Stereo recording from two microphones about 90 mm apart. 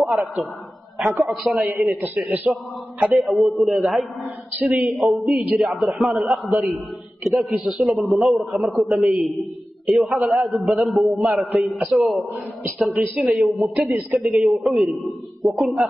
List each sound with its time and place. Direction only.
0.0 s a man's voice: centre (ahead or behind)
2.1 s a man's voice: 15° right (ahead or behind)
3.2 s a man's voice: centre (ahead or behind)